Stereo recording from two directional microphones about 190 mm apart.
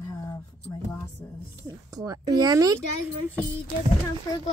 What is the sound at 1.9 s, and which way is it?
Speech, 20° right (ahead or behind).